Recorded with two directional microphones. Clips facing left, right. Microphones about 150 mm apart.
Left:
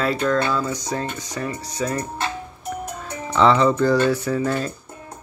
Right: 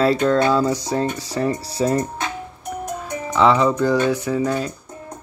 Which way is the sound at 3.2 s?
10° right (ahead or behind).